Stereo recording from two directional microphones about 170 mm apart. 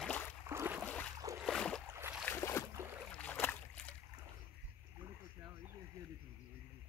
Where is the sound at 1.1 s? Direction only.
20° right (ahead or behind).